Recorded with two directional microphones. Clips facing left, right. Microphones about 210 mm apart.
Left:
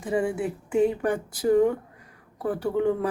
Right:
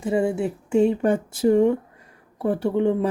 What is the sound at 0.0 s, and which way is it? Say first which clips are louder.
Speech: right 4 dB; 25° right (ahead or behind).